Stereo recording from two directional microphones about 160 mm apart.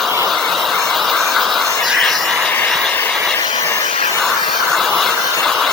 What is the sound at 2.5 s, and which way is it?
Train, 5° left (ahead or behind).